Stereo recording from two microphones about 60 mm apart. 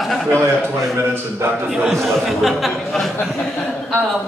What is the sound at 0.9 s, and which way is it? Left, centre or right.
Speech, right.